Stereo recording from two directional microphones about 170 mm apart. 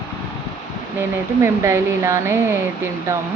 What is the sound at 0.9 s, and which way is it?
Speech, 15° right (ahead or behind).